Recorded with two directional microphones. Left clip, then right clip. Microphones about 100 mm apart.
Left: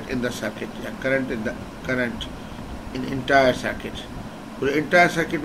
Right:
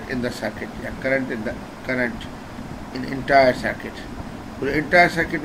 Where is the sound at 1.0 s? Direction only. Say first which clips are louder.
Right 1 dB; 15° left (ahead or behind).